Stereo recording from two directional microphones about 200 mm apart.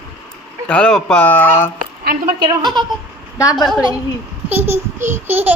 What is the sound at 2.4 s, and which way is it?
Speech, 20° right (ahead or behind).